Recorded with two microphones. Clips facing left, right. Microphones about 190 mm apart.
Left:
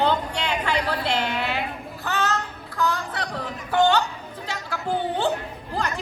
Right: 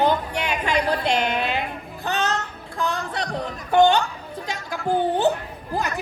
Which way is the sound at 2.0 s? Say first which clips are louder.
Right 1 dB; 20° right (ahead or behind).